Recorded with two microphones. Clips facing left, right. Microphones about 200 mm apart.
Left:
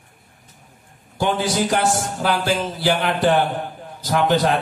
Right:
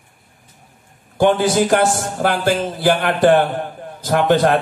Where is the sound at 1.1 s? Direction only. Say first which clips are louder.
Right 6 dB; 50° right (ahead or behind).